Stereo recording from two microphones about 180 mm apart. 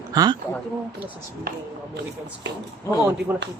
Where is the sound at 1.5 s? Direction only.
60° right (ahead or behind).